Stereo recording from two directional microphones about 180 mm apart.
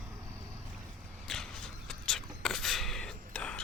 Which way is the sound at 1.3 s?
5° left (ahead or behind).